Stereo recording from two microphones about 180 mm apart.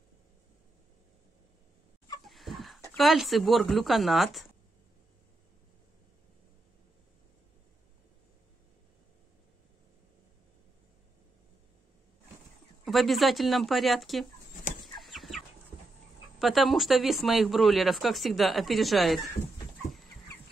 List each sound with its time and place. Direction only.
2.2 s chicken: centre (ahead or behind)
3.0 s speech: centre (ahead or behind)
12.8 s speech: centre (ahead or behind)
15.0 s chicken: centre (ahead or behind)
16.3 s speech: centre (ahead or behind)